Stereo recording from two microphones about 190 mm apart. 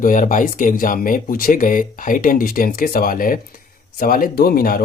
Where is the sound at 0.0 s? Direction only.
45° left (ahead or behind).